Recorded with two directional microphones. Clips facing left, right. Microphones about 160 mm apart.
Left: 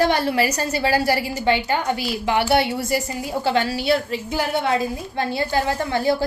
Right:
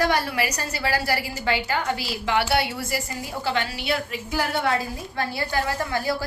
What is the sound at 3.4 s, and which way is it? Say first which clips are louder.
A woman's voice: left 6 dB; 35° left (ahead or behind).